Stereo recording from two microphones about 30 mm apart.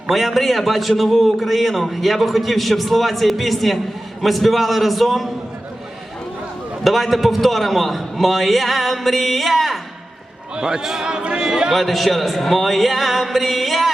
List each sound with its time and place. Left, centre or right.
0.1 s a man's voice: centre
6.8 s a man's voice: centre
10.5 s a man's voice: right
11.7 s a man's voice: centre